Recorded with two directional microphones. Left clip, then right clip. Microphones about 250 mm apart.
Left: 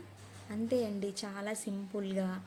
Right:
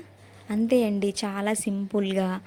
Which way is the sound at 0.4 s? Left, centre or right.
Right.